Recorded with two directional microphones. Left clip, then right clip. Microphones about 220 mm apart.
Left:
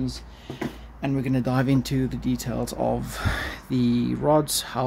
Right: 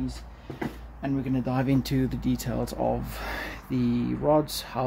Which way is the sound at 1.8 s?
Centre (ahead or behind).